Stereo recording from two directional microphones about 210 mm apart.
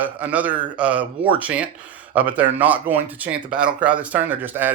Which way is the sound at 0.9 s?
25° right (ahead or behind).